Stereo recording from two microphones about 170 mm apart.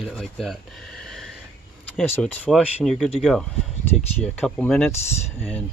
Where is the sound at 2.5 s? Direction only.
Centre (ahead or behind).